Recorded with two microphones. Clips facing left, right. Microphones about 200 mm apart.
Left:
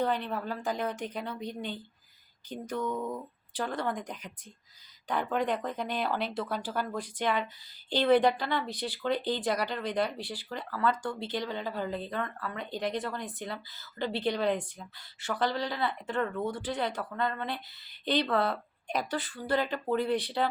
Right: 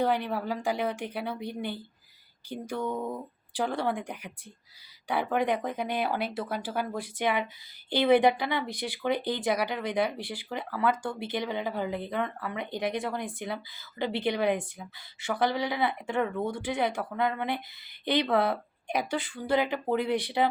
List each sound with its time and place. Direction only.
0.0 s speech: 10° right (ahead or behind)
2.9 s speech: 30° right (ahead or behind)
3.5 s speech: 10° right (ahead or behind)